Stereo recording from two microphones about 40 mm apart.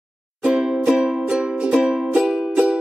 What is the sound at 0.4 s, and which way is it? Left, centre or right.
Music, centre.